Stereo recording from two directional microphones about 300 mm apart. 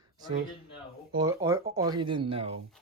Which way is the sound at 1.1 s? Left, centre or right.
Centre.